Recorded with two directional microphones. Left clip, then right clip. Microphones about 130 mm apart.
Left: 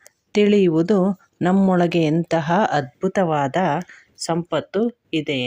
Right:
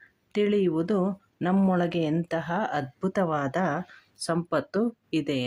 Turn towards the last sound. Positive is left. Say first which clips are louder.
# left 5 dB
turn(degrees=15)  # may be behind; listen again after turning